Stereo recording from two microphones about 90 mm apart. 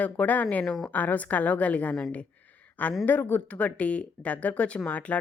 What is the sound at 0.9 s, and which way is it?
Speech, 20° left (ahead or behind).